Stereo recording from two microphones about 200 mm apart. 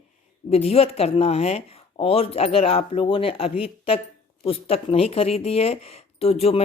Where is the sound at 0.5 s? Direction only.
30° left (ahead or behind).